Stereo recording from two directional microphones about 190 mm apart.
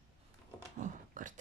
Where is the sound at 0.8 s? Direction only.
45° right (ahead or behind).